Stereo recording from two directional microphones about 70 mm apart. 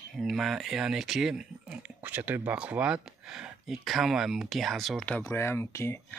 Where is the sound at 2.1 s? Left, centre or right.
Right.